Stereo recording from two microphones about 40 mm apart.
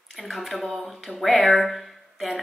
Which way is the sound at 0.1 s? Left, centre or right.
Centre.